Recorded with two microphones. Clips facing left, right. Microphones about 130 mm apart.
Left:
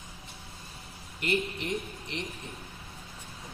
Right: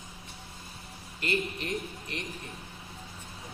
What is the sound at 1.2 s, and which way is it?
Speech, 20° left (ahead or behind).